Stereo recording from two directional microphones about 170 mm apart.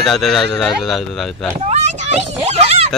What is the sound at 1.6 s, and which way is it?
Speech, 40° right (ahead or behind).